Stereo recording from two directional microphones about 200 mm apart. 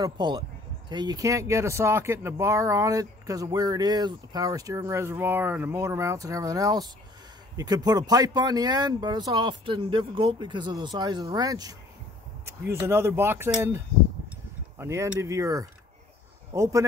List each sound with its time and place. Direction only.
0.0 s speech: 20° right (ahead or behind)